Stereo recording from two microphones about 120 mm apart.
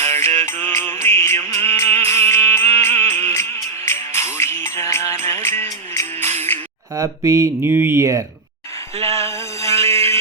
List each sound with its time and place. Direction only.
0.0 s music: 20° left (ahead or behind)
6.9 s speech: 25° right (ahead or behind)
9.7 s a sound: 55° right (ahead or behind)